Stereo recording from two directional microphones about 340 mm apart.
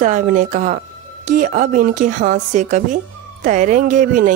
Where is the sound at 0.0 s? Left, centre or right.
Right.